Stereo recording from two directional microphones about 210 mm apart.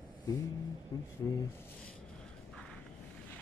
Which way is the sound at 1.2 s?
15° left (ahead or behind).